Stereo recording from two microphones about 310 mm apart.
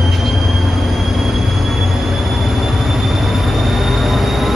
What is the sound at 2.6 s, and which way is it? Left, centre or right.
Train, centre.